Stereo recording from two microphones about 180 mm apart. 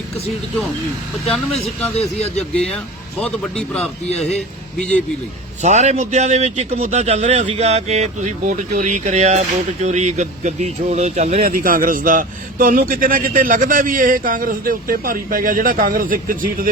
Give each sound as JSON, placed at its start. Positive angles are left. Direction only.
{"t": 2.0, "sound": "speech", "side_deg": 35}
{"t": 2.6, "sound": "a man's voice", "side_deg": 5}
{"t": 5.6, "sound": "speech", "side_deg": -40}
{"t": 11.4, "sound": "a man's voice", "side_deg": -50}